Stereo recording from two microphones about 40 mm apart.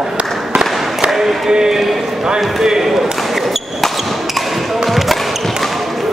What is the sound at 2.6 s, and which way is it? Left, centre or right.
Basketball bounce, centre.